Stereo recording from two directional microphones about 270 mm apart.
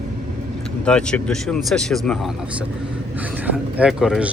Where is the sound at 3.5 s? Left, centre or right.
Centre.